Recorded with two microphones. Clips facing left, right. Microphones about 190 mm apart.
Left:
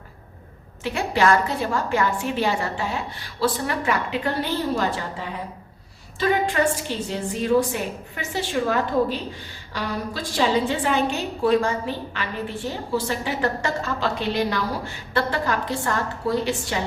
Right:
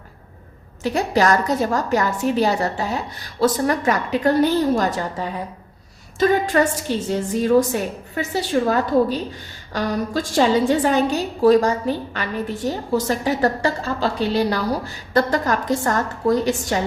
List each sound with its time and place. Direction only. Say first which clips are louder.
0.8 s a woman's voice: right 3 dB; 40° right (ahead or behind)
6.1 s a woman's voice: right 4 dB; 45° right (ahead or behind)